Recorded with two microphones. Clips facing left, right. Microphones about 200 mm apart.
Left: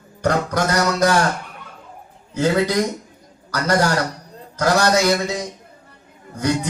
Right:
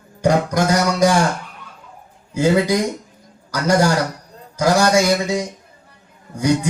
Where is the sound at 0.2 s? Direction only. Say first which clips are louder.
Right 3 dB; 10° right (ahead or behind).